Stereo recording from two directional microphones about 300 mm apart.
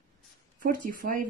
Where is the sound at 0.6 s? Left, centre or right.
Right.